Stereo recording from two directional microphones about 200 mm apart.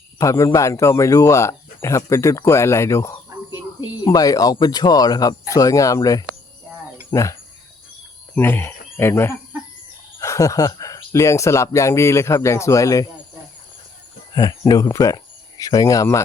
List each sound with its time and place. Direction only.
0.2 s speech: 15° left (ahead or behind)
8.4 s speech: 10° left (ahead or behind)
14.3 s speech: 20° left (ahead or behind)